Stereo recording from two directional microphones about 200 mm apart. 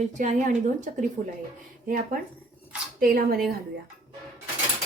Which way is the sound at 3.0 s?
45° right (ahead or behind).